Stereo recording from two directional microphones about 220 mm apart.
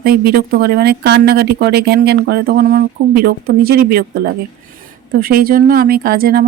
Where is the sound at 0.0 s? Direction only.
45° right (ahead or behind).